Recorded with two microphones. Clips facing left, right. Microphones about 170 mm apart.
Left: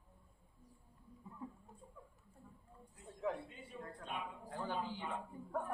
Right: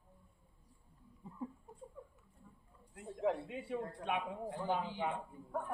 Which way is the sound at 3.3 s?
85° right.